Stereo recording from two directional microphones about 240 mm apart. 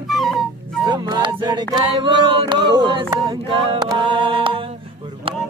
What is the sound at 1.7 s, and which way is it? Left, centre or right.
A capella, centre.